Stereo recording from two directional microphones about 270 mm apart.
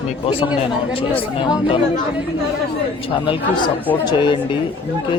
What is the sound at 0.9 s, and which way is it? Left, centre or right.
Speech, centre.